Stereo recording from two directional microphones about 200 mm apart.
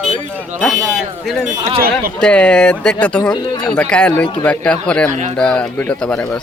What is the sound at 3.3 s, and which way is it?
Speech, 20° left (ahead or behind).